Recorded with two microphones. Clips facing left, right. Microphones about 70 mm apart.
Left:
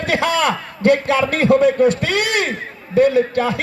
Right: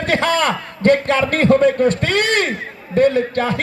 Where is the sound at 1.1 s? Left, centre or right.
Right.